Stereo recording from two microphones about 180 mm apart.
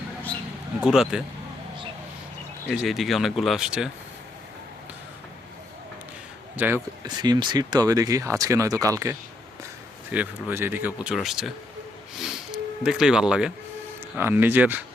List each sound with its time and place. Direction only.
0.8 s speech: 5° right (ahead or behind)
2.6 s speech: centre (ahead or behind)
6.6 s speech: 10° right (ahead or behind)
7.0 s speech: 25° right (ahead or behind); by 11.5 s centre (ahead or behind)
12.2 s a sound: 5° right (ahead or behind)
14.2 s speech: 10° right (ahead or behind)